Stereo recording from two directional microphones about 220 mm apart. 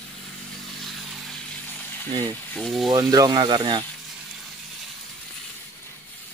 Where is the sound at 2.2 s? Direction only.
5° left (ahead or behind).